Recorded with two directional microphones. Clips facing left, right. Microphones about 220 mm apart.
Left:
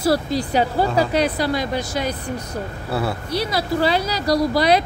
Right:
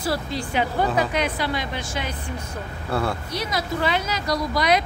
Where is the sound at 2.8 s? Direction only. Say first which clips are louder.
Even; 5° left (ahead or behind).